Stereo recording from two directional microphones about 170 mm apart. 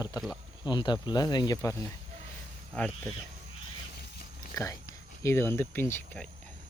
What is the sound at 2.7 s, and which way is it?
Speech, centre (ahead or behind).